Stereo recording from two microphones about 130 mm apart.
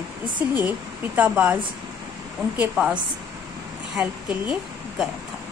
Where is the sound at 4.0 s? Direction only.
10° right (ahead or behind).